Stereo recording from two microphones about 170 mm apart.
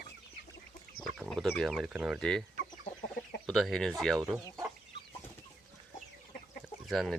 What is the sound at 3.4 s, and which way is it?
Speech, 5° left (ahead or behind).